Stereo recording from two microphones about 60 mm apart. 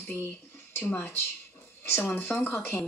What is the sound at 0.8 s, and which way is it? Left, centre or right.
Speech, left.